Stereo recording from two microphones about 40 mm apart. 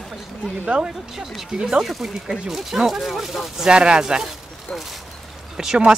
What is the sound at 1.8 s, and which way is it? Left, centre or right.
Speech, centre.